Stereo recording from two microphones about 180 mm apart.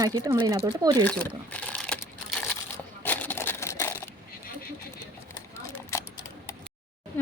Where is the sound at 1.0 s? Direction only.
10° left (ahead or behind).